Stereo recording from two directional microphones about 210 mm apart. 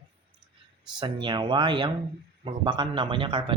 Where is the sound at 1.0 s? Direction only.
20° right (ahead or behind).